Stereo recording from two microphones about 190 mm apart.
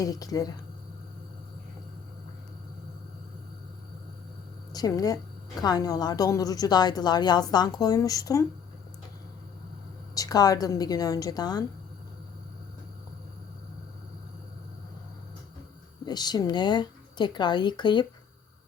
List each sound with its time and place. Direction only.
0.0 s a woman's voice: 20° left (ahead or behind)
4.7 s a woman's voice: 20° left (ahead or behind)
10.2 s a woman's voice: 20° left (ahead or behind)
16.0 s a woman's voice: 20° left (ahead or behind)